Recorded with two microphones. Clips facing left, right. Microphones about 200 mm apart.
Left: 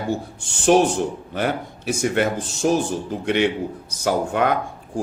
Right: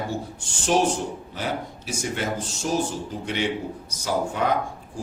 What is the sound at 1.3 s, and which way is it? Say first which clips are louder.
Speech: left 5 dB; 60° left (ahead or behind).